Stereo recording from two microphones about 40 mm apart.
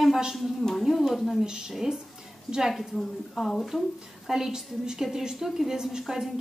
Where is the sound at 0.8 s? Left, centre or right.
Centre.